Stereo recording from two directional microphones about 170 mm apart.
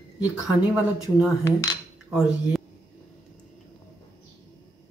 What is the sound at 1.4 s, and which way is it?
Coin, 20° left (ahead or behind).